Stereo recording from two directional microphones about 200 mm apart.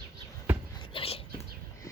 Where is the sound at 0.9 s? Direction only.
30° left (ahead or behind).